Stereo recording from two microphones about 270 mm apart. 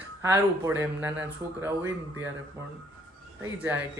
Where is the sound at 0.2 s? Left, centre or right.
Centre.